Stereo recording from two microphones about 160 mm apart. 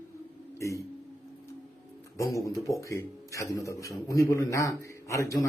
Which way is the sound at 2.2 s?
20° left (ahead or behind).